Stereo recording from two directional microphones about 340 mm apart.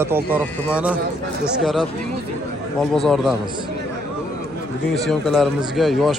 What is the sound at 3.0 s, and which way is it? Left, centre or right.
Speech, centre.